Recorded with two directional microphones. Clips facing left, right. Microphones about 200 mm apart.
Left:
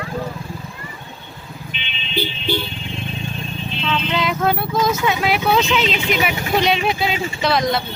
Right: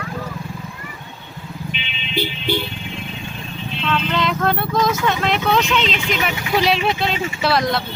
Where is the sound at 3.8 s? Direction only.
5° left (ahead or behind).